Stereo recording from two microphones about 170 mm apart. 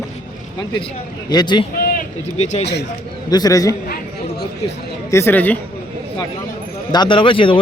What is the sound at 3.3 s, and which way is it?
Speech, 20° left (ahead or behind).